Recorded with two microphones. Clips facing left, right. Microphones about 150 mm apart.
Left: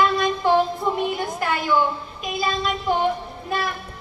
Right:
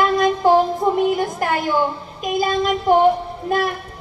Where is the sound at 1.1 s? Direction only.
45° right (ahead or behind).